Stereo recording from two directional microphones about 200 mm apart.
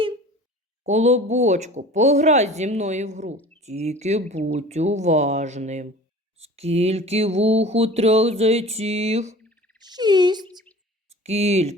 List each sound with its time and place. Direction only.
0.9 s speech: 35° right (ahead or behind)
3.3 s a sound: 10° left (ahead or behind)
3.6 s speech: 35° right (ahead or behind)
9.9 s speech: 20° right (ahead or behind)
11.2 s speech: 30° right (ahead or behind)